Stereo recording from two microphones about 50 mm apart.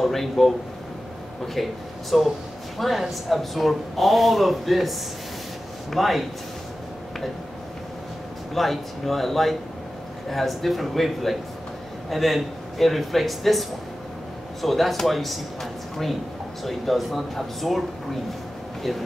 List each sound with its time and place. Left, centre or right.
0.0 s speech: centre
1.5 s speech: centre
8.5 s speech: centre